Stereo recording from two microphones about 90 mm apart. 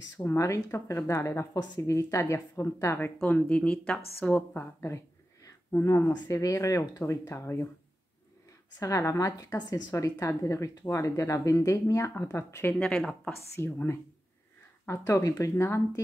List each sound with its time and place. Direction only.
0.4 s speech: 35° left (ahead or behind)
3.3 s speech: 15° left (ahead or behind)
4.6 s a sound: 30° left (ahead or behind)
6.1 s speech: 40° left (ahead or behind)
8.7 s speech: 35° left (ahead or behind)
12.7 s speech: 5° left (ahead or behind)
13.6 s speech: 25° left (ahead or behind)